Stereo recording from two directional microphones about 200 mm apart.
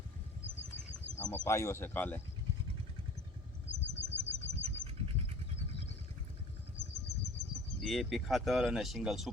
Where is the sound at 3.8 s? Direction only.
60° left (ahead or behind).